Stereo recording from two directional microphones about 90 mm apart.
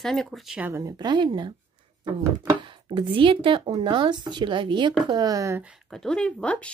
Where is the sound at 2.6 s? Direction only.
65° right (ahead or behind).